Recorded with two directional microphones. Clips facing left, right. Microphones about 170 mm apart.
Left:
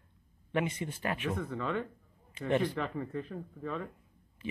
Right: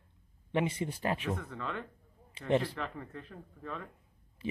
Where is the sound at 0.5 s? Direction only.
30° right (ahead or behind).